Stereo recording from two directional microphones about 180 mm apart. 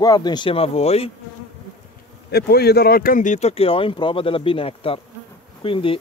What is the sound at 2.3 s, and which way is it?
Speech, 60° left (ahead or behind).